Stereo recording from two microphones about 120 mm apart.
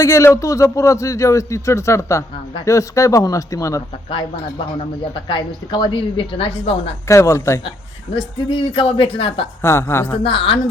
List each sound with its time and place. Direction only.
0.0 s a man's voice: 25° left (ahead or behind)
4.1 s a woman's voice: 45° left (ahead or behind)
7.1 s a man's voice: 25° left (ahead or behind)
8.1 s a woman's voice: 50° left (ahead or behind)
9.6 s a man's voice: 20° left (ahead or behind)
10.2 s a woman's voice: 50° left (ahead or behind)